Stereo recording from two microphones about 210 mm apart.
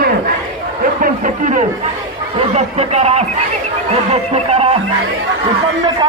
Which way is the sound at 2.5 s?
30° right (ahead or behind).